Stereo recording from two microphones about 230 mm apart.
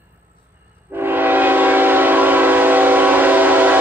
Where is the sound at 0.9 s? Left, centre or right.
Centre.